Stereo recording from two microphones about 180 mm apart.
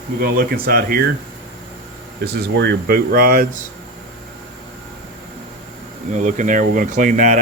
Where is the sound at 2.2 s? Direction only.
60° right (ahead or behind).